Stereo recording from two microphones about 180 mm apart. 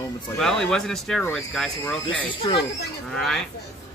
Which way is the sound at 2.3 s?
30° left (ahead or behind).